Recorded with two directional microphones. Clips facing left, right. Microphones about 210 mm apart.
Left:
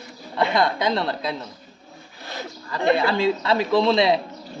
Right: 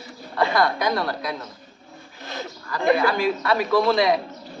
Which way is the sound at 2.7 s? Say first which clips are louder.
Even; 25° left (ahead or behind).